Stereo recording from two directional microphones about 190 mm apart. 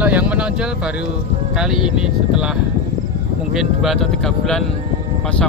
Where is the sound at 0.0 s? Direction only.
5° right (ahead or behind).